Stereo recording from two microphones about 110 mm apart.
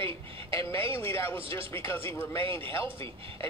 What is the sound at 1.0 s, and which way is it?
Speech, 20° left (ahead or behind).